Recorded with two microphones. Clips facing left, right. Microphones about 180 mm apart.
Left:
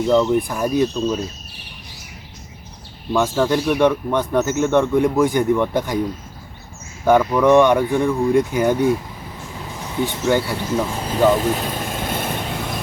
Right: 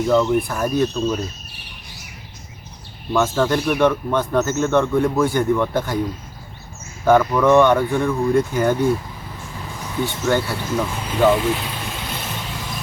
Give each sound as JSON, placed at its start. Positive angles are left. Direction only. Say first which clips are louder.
{"t": 0.1, "sound": "speech", "louder": "left 1 dB", "side_deg": 15}
{"t": 3.1, "sound": "speech", "louder": "left 1 dB", "side_deg": 15}
{"t": 7.0, "sound": "speech", "louder": "even", "side_deg": 10}
{"t": 10.1, "sound": "speech", "louder": "left 1 dB", "side_deg": 15}
{"t": 10.9, "sound": "vehicle", "louder": "even", "side_deg": 35}